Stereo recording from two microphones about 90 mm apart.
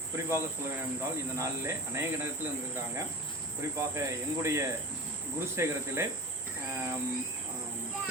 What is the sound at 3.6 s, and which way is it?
Speech, 35° right (ahead or behind).